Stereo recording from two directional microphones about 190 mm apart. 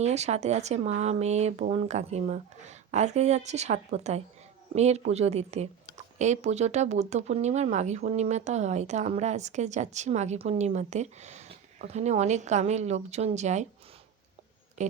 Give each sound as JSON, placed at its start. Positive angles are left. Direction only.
{"t": 0.0, "sound": "speech", "side_deg": -35}
{"t": 14.8, "sound": "speech", "side_deg": -40}